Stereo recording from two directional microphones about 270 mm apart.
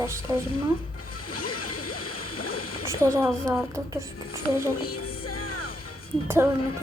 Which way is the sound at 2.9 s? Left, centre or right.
Centre.